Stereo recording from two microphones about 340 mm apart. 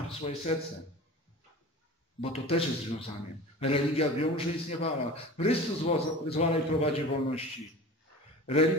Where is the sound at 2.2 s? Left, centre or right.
Centre.